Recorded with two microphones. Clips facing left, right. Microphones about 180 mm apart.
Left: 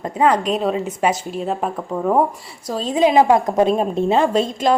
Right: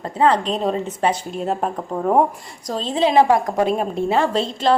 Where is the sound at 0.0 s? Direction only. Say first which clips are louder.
Left 1 dB; 15° left (ahead or behind).